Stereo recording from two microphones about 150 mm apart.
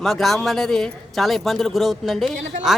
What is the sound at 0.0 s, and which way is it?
A woman's voice, centre (ahead or behind).